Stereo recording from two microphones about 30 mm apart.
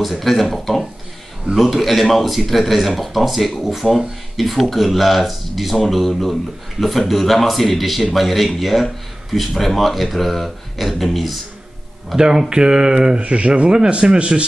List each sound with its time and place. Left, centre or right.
0.2 s a man's voice: centre
12.2 s speech: right
13.2 s speech: right